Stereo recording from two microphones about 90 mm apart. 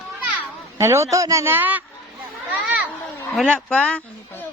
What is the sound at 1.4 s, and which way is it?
Speech, 20° right (ahead or behind).